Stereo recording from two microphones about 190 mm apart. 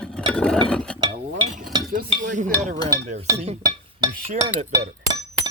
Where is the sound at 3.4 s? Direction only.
35° right (ahead or behind).